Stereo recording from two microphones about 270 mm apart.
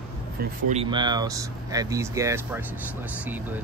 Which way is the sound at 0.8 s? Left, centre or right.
Centre.